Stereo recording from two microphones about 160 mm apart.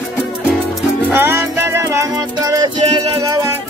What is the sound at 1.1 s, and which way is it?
Music, 15° right (ahead or behind).